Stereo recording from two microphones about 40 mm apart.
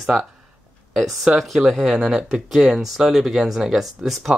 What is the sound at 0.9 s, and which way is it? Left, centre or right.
Speech, centre.